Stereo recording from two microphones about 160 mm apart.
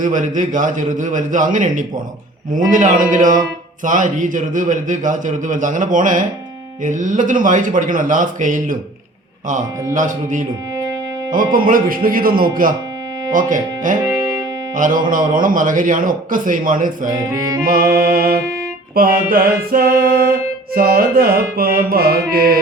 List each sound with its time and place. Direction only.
0.0 s a man's voice: 50° right (ahead or behind)
9.9 s a man's voice: 55° right (ahead or behind)
17.1 s music: 25° right (ahead or behind)
17.6 s speech: 60° right (ahead or behind)
18.9 s mantra: 65° right (ahead or behind)